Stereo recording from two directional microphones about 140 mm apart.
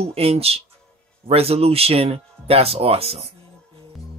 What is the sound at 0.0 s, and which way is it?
Speech, 45° right (ahead or behind).